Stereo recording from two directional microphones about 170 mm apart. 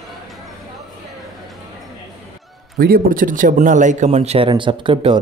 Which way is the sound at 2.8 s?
60° right (ahead or behind).